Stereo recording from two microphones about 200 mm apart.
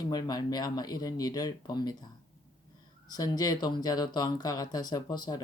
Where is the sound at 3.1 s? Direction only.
20° left (ahead or behind).